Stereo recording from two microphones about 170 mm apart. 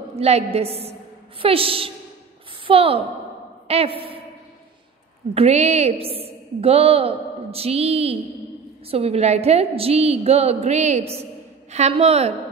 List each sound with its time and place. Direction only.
0.1 s a woman's voice: 40° right (ahead or behind)
5.3 s a woman's voice: 40° right (ahead or behind)